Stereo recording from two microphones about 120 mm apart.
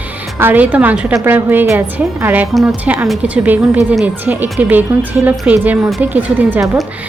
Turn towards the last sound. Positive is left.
turn(degrees=-15)  # may be behind; listen again after turning